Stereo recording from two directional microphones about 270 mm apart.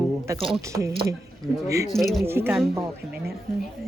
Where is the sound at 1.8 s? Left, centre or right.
Centre.